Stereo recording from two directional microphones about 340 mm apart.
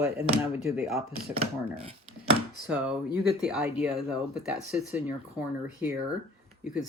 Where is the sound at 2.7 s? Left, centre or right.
Centre.